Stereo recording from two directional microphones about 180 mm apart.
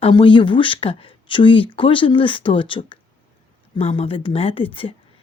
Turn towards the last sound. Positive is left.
turn(degrees=30)  # may be behind; listen again after turning